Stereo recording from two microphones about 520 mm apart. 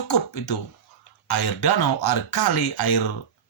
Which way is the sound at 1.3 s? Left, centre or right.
Left.